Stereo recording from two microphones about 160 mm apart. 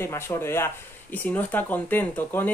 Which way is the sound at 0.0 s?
15° left (ahead or behind).